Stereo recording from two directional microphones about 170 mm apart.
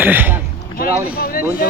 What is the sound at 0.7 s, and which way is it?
Speech, 65° left (ahead or behind).